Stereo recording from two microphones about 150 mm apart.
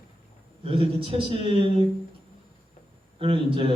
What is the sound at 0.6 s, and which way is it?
A man's voice, 35° right (ahead or behind).